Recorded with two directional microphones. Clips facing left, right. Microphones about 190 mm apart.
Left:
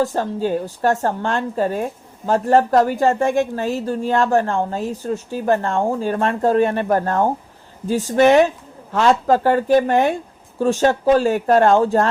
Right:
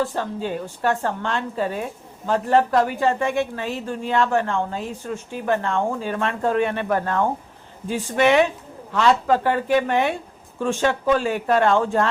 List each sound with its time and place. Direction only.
0.0 s speech: 40° left (ahead or behind)